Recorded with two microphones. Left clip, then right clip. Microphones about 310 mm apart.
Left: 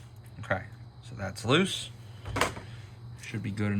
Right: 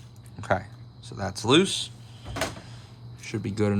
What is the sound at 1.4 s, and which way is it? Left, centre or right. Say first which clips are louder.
Speech: right 5 dB; centre.